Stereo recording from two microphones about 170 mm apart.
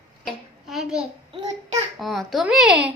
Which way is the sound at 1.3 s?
40° right (ahead or behind).